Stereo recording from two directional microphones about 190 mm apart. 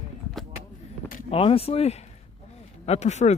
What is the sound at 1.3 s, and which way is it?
Speech, 30° left (ahead or behind).